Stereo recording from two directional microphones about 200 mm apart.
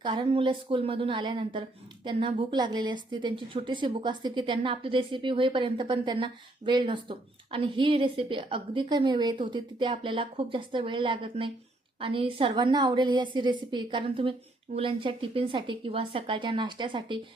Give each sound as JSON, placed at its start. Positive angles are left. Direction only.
{"t": 0.0, "sound": "a woman's voice", "side_deg": -25}